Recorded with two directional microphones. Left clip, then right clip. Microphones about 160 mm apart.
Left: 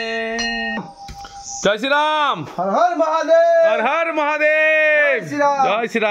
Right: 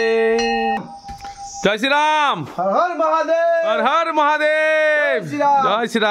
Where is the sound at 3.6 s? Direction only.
30° right (ahead or behind).